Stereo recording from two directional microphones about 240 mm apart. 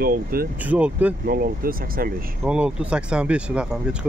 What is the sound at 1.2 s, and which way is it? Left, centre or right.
Speech, right.